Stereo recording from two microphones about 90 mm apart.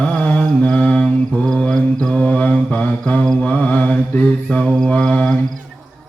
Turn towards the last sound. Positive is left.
turn(degrees=10)  # may be behind; listen again after turning